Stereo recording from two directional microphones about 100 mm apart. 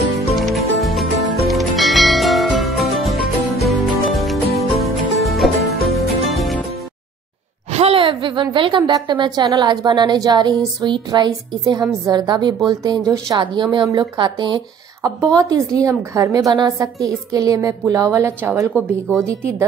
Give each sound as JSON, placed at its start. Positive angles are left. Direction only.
{"t": 0.3, "sound": "music", "side_deg": 0}
{"t": 7.7, "sound": "a woman's voice", "side_deg": -75}
{"t": 15.0, "sound": "a woman's voice", "side_deg": -35}
{"t": 18.8, "sound": "speech", "side_deg": 20}
{"t": 19.1, "sound": "a woman's voice", "side_deg": -25}